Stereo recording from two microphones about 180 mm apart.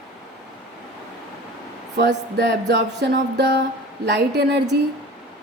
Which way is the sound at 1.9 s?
70° right (ahead or behind).